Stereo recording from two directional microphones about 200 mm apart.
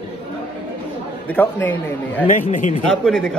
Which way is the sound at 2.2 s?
40° left (ahead or behind).